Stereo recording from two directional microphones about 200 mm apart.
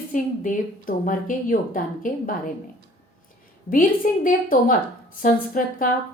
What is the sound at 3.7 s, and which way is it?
A woman's voice, 45° left (ahead or behind).